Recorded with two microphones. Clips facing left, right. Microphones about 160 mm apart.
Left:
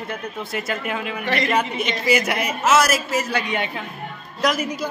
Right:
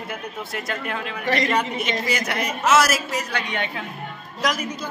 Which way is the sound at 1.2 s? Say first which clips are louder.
Right 2 dB; 40° right (ahead or behind).